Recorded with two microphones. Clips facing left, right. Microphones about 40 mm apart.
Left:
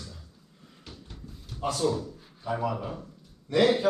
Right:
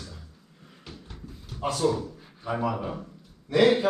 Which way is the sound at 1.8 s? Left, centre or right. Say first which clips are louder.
Right 3 dB; right.